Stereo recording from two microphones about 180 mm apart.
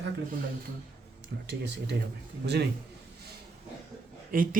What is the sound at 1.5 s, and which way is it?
Speech, 70° right (ahead or behind).